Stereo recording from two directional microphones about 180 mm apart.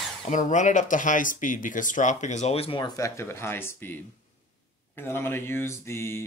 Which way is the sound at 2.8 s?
15° left (ahead or behind).